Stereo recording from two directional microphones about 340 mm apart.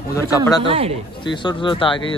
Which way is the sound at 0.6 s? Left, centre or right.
Centre.